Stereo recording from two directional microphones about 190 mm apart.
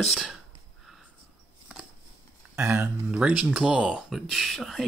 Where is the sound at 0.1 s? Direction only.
5° right (ahead or behind).